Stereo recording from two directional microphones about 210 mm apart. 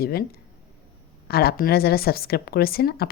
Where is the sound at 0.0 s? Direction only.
45° left (ahead or behind).